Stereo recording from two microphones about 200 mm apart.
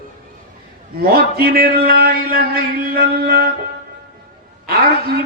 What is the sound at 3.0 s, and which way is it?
Music, 50° right (ahead or behind).